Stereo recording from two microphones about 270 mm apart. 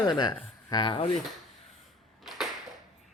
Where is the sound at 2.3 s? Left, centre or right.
Centre.